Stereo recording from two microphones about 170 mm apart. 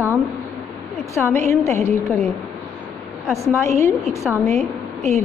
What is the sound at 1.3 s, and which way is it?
Speech, 15° left (ahead or behind).